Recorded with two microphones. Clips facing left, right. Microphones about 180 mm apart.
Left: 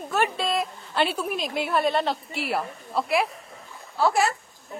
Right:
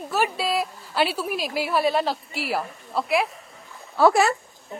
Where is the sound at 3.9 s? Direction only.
65° right (ahead or behind).